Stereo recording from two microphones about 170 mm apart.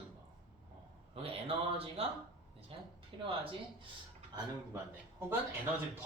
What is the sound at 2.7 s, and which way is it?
Speech, 30° right (ahead or behind).